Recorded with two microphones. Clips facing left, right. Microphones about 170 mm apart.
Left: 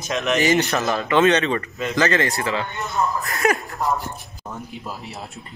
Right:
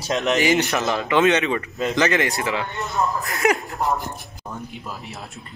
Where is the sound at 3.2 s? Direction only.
20° right (ahead or behind).